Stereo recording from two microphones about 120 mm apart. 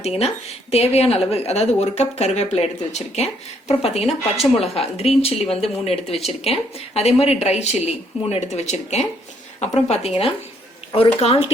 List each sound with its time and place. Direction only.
0.0 s speech: 60° left (ahead or behind)